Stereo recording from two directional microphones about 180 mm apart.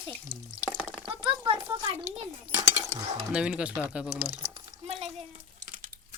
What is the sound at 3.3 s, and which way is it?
Speech, 5° right (ahead or behind).